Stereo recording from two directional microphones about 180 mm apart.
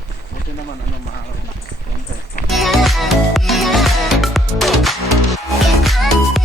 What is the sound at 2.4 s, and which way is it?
Music, centre (ahead or behind).